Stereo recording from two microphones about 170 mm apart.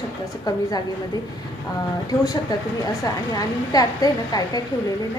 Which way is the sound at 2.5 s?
25° left (ahead or behind).